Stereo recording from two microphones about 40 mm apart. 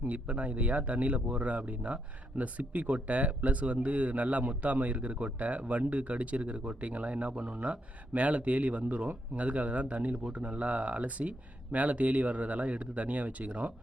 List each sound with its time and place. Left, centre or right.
0.0 s speech: right